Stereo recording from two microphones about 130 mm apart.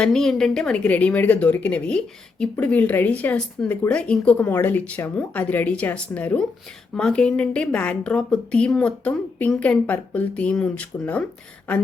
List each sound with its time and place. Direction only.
0.0 s a woman's voice: 5° left (ahead or behind)